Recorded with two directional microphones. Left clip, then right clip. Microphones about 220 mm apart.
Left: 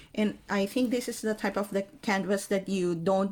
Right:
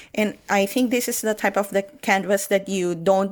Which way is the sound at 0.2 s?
35° right (ahead or behind).